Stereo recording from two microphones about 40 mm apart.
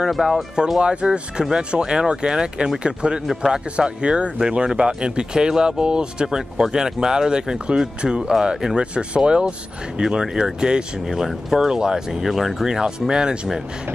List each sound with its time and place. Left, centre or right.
0.2 s speech: centre
0.7 s speech: right